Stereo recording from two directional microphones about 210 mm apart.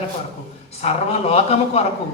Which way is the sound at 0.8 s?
30° left (ahead or behind).